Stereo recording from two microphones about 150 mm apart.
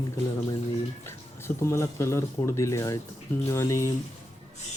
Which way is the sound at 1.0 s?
20° left (ahead or behind).